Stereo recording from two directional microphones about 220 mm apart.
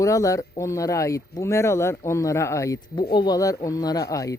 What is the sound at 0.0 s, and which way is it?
Speech, 15° left (ahead or behind).